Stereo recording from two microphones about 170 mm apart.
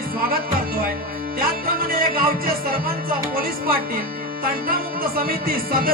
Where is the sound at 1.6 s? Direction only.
60° right (ahead or behind).